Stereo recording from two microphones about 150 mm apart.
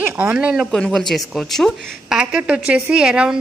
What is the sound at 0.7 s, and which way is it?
A woman's voice, 5° left (ahead or behind).